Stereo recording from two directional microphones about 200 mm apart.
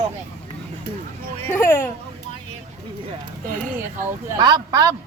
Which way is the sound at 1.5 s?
10° left (ahead or behind).